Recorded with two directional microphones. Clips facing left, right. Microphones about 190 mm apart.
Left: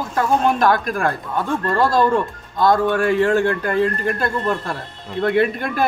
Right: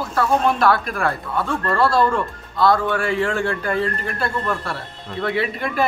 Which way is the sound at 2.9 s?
40° left (ahead or behind).